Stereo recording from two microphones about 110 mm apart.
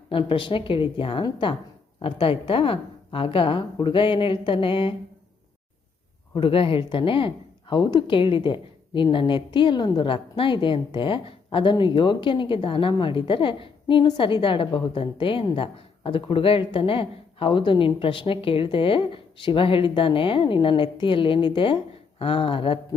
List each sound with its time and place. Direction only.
0.1 s a woman's voice: 50° left (ahead or behind)
6.3 s a woman's voice: 55° left (ahead or behind)